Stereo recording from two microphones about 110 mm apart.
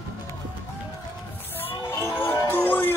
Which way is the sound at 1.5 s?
20° left (ahead or behind).